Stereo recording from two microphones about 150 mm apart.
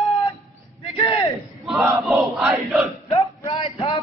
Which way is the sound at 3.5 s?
40° left (ahead or behind).